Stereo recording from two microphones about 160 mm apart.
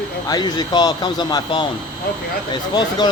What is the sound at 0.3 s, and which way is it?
Speech, 25° left (ahead or behind).